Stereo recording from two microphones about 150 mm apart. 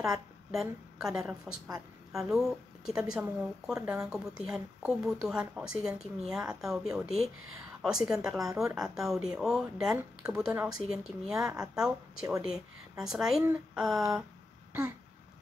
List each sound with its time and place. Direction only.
0.1 s a woman's voice: 5° right (ahead or behind)
3.8 s speech: 15° right (ahead or behind)
4.1 s speech: 5° right (ahead or behind)
13.4 s speech: 15° right (ahead or behind)
14.7 s a sound: 10° right (ahead or behind)